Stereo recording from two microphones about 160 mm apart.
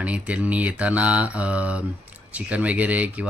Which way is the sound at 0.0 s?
10° right (ahead or behind).